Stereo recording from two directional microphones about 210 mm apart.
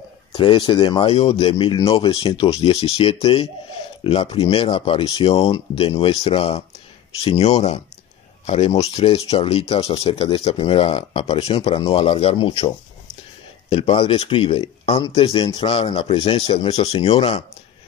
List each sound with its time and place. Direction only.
0.3 s speech: 20° left (ahead or behind)